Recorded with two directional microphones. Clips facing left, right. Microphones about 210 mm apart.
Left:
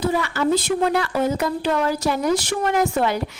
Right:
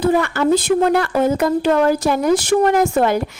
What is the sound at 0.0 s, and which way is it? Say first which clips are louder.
A woman's voice: right 5 dB; 55° right (ahead or behind).